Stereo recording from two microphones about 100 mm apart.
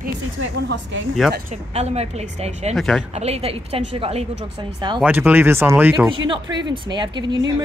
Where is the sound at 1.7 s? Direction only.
90° right.